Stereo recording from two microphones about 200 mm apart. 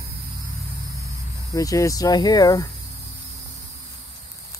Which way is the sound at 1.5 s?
15° left (ahead or behind).